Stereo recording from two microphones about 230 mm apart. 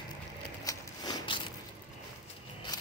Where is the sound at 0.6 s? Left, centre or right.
Centre.